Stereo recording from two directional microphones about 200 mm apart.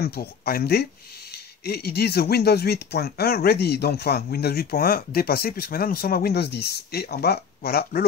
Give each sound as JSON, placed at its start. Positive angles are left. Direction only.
{"t": 0.0, "sound": "speech", "side_deg": 50}